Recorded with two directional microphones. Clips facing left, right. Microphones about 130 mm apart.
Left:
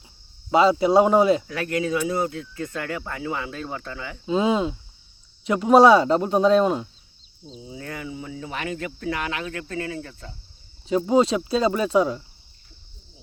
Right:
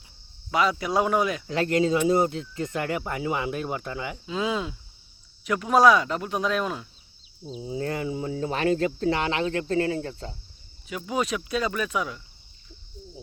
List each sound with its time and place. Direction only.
0.5 s speech: 25° left (ahead or behind)
1.5 s speech: 25° right (ahead or behind)
4.3 s speech: 30° left (ahead or behind)
7.6 s speech: 35° right (ahead or behind)
10.8 s speech: 30° left (ahead or behind)